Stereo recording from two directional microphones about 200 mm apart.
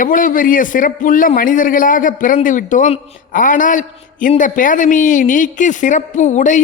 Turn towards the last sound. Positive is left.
turn(degrees=40)  # may be behind; listen again after turning